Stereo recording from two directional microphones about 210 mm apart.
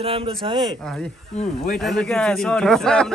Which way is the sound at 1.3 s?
35° left (ahead or behind).